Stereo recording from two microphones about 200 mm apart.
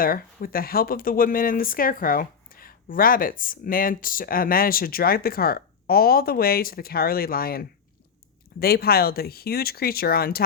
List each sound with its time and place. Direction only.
0.0 s speech: 45° left (ahead or behind)